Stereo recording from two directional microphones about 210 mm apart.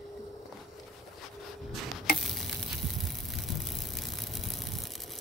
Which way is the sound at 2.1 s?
Centre (ahead or behind).